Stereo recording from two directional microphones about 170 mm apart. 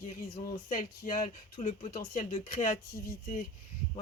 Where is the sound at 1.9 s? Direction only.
50° left (ahead or behind).